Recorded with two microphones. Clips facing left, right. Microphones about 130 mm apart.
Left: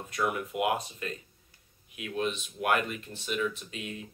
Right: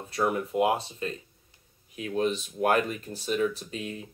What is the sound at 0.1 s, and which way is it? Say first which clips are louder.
Speech: right 4 dB; 35° right (ahead or behind).